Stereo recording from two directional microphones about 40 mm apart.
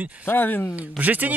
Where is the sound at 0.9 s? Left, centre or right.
Right.